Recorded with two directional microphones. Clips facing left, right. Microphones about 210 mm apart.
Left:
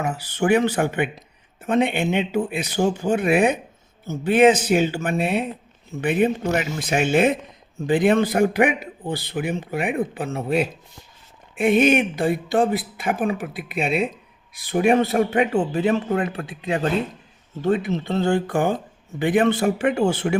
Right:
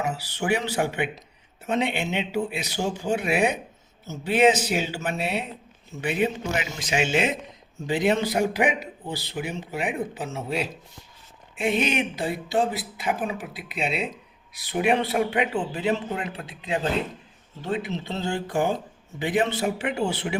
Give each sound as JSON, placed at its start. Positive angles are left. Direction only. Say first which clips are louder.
{"t": 0.0, "sound": "a man's voice", "louder": "left 5 dB", "side_deg": 50}
{"t": 17.6, "sound": "speech", "louder": "left 7 dB", "side_deg": 50}